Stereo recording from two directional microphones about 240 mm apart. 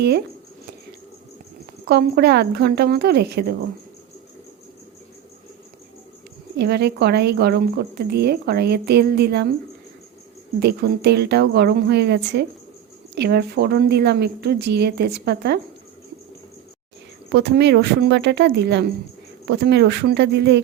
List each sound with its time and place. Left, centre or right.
1.9 s a woman's voice: right
6.6 s speech: right
10.6 s speech: right
17.2 s speech: right